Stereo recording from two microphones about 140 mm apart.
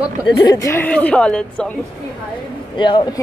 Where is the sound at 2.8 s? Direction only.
35° left (ahead or behind).